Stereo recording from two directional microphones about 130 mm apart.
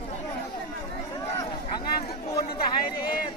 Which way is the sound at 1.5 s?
35° left (ahead or behind).